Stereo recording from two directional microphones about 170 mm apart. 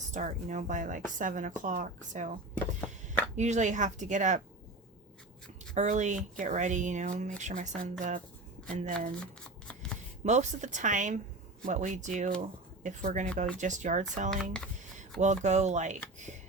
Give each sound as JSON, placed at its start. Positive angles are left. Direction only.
{"t": 0.1, "sound": "speech", "side_deg": -45}
{"t": 3.3, "sound": "speech", "side_deg": -45}
{"t": 5.7, "sound": "speech", "side_deg": -45}
{"t": 10.2, "sound": "speech", "side_deg": -45}
{"t": 14.3, "sound": "speech", "side_deg": 5}
{"t": 15.2, "sound": "speech", "side_deg": -45}